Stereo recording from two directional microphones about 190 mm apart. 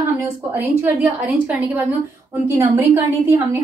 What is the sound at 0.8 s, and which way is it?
A woman's voice, 10° right (ahead or behind).